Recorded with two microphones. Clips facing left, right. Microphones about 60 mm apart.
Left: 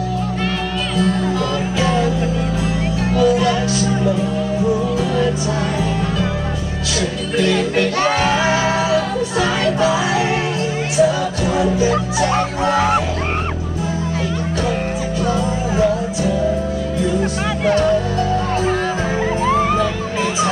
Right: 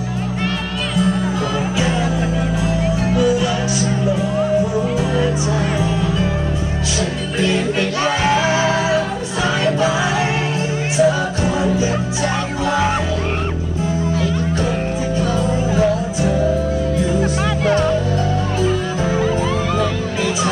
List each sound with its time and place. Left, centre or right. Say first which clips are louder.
3.2 s music: left 3 dB; left
7.5 s music: left 2 dB; left
8.4 s music: even; right
12.2 s music: left 3 dB; left
15.2 s music: left 2 dB; left
19.2 s music: left 2 dB; left